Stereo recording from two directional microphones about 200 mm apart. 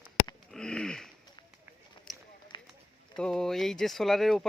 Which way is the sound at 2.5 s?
20° left (ahead or behind).